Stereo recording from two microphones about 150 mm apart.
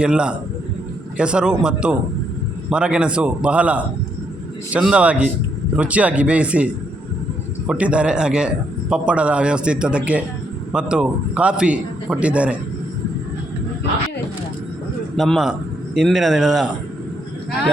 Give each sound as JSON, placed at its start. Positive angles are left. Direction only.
{"t": 0.0, "sound": "a man's voice", "side_deg": -5}
{"t": 7.7, "sound": "a man's voice", "side_deg": -10}
{"t": 15.1, "sound": "a man's voice", "side_deg": 0}